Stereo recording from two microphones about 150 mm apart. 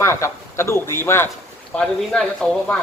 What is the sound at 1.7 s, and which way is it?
Speech, 5° left (ahead or behind).